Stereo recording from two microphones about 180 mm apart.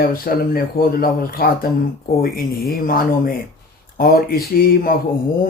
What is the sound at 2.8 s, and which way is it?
Speech, 55° left (ahead or behind).